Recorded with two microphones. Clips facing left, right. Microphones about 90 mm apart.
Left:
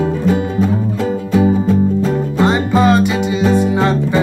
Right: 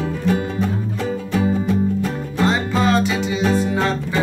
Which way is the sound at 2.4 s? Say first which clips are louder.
Left 4 dB; 20° left (ahead or behind).